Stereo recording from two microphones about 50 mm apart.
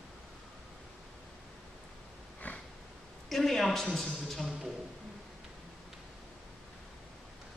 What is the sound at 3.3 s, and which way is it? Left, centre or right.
A man's voice, centre.